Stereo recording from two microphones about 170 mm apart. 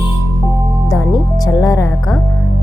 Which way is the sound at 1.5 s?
20° left (ahead or behind).